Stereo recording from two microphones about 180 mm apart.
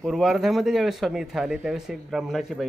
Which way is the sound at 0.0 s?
Centre (ahead or behind).